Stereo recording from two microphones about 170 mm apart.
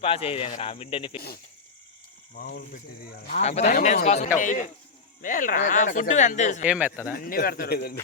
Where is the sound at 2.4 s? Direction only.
70° left (ahead or behind).